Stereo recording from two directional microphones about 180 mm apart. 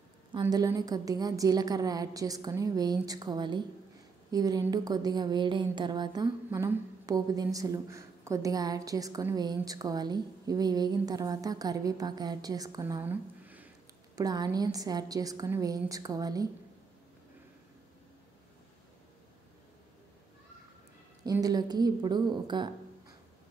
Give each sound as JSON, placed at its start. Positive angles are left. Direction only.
{"t": 0.4, "sound": "a woman's voice", "side_deg": -20}
{"t": 14.1, "sound": "a woman's voice", "side_deg": -20}
{"t": 21.2, "sound": "a woman's voice", "side_deg": -20}